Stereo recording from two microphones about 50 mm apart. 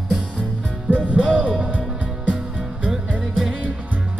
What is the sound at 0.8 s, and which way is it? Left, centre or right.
Music, right.